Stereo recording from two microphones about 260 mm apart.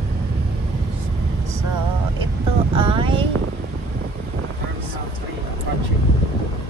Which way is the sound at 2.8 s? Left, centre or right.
Centre.